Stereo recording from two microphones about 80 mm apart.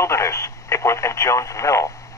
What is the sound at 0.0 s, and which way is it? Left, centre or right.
Speech, left.